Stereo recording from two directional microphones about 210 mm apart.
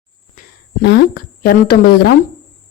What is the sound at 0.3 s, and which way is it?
A woman's voice, 50° left (ahead or behind).